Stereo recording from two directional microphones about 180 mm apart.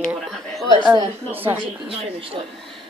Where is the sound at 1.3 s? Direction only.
10° right (ahead or behind).